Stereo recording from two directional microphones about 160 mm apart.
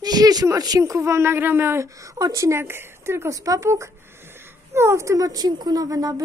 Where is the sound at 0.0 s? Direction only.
25° right (ahead or behind).